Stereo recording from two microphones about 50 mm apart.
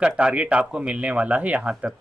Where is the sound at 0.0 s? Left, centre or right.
Right.